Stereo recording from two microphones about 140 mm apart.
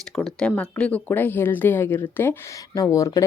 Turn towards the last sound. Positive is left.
turn(degrees=25)  # may be behind; listen again after turning